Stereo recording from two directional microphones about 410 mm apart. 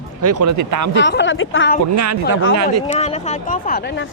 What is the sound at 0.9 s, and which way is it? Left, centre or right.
Speech, left.